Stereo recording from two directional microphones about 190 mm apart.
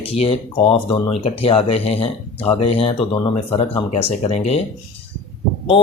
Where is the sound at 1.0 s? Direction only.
30° left (ahead or behind).